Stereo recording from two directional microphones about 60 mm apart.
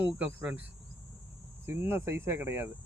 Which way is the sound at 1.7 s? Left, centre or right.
Right.